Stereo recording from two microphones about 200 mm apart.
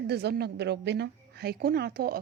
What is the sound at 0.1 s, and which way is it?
A woman's voice, 55° right (ahead or behind).